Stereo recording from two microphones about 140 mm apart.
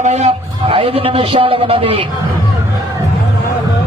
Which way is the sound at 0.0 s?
50° right (ahead or behind).